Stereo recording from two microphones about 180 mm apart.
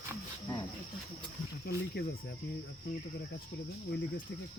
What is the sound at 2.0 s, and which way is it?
Speech, 65° left (ahead or behind).